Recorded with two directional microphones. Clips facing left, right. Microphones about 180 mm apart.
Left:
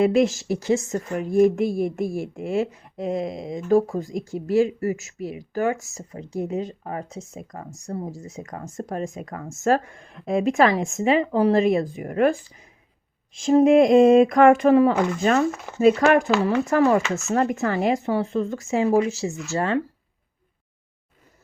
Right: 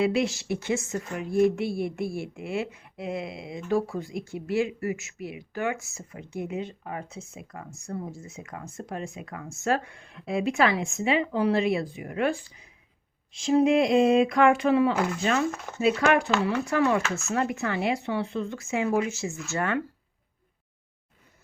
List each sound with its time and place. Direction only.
0.0 s a woman's voice: 45° left (ahead or behind)
15.4 s speech: centre (ahead or behind)
15.8 s a woman's voice: 45° left (ahead or behind)